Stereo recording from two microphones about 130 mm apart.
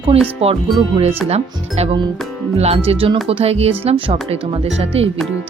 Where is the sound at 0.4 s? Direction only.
50° right (ahead or behind).